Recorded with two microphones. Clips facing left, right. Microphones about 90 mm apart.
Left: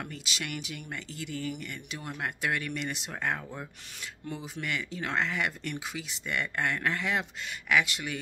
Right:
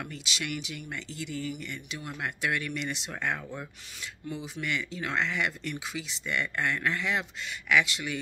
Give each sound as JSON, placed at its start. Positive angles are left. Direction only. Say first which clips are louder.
{"t": 0.0, "sound": "speech", "louder": "right 1 dB", "side_deg": 45}